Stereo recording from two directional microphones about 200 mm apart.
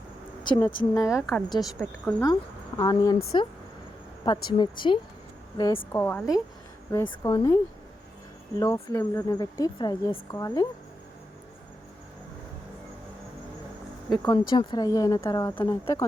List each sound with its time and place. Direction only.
0.4 s a woman's voice: 20° left (ahead or behind)
0.9 s a woman's voice: 5° right (ahead or behind)
2.2 s speech: 20° left (ahead or behind)
4.5 s speech: 25° left (ahead or behind)
5.9 s a woman's voice: 10° left (ahead or behind)
14.2 s a woman's voice: 20° left (ahead or behind)